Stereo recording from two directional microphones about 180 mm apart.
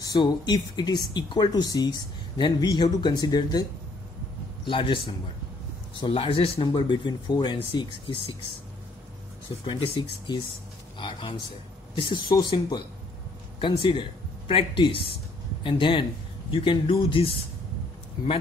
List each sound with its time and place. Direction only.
0.0 s speech: 25° left (ahead or behind)
4.6 s speech: 30° left (ahead or behind)
9.7 s speech: 25° left (ahead or behind)